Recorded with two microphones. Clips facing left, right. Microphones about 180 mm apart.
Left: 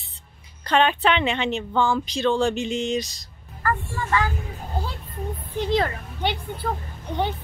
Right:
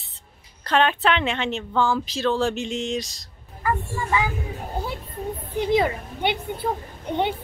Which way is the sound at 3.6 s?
15° right (ahead or behind).